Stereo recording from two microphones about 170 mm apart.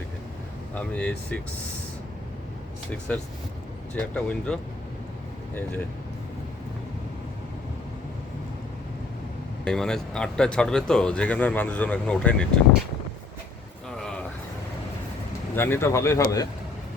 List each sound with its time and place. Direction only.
0.7 s speech: 10° left (ahead or behind)
3.1 s speech: 10° left (ahead or behind)
9.6 s speech: 5° left (ahead or behind)
13.9 s a sound: 5° left (ahead or behind)
15.5 s speech: 15° left (ahead or behind)